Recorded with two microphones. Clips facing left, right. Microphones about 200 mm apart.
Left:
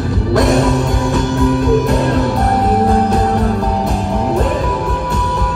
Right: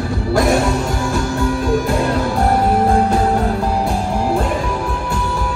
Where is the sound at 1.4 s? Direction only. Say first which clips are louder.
Left 5 dB; 20° left (ahead or behind).